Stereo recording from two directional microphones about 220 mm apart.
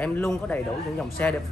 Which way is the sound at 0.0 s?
5° left (ahead or behind).